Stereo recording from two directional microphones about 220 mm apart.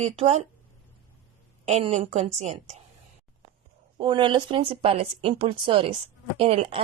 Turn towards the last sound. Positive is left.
turn(degrees=-25)  # may be behind; listen again after turning